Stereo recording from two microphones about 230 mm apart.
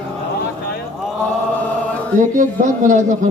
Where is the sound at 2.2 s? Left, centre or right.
Right.